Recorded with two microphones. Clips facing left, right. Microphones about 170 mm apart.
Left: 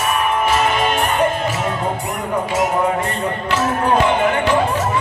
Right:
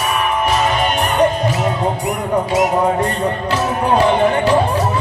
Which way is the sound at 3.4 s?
35° right (ahead or behind).